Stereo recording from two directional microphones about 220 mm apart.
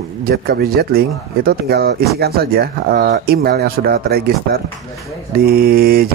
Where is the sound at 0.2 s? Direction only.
45° right (ahead or behind).